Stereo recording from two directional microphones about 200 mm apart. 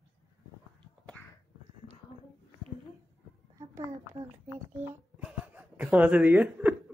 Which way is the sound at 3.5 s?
15° right (ahead or behind).